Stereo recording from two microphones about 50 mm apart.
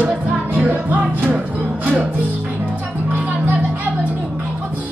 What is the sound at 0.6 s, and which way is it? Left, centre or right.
Music, right.